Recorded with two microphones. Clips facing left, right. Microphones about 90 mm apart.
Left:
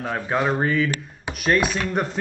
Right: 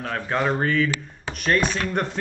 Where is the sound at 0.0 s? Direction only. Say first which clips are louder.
Left 1 dB; 10° left (ahead or behind).